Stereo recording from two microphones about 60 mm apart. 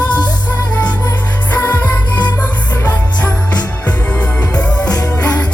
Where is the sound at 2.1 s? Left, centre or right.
Left.